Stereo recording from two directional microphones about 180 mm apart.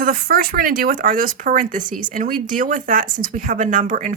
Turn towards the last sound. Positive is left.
turn(degrees=-45)  # may be behind; listen again after turning